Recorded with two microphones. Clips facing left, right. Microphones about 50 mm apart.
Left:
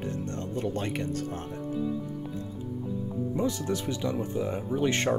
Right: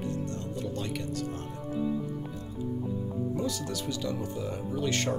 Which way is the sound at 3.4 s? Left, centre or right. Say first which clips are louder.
Left 4 dB; left.